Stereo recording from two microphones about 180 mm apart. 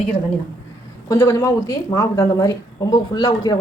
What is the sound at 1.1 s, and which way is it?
A woman's voice, 15° left (ahead or behind).